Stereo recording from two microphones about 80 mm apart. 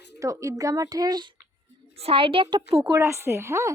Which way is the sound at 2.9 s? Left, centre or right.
Right.